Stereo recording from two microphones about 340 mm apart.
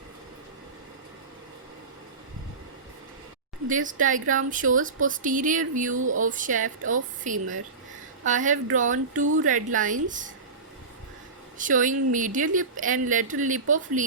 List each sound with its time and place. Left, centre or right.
3.7 s speech: right
6.0 s speech: right
6.2 s speech: right
11.5 s speech: right